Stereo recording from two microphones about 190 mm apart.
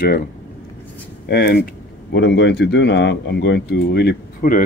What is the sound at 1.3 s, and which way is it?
Speech, 60° left (ahead or behind).